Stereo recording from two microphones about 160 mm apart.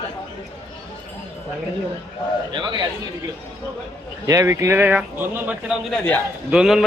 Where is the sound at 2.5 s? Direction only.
30° right (ahead or behind).